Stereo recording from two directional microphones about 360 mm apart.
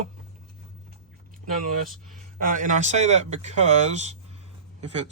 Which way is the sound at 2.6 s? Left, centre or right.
Right.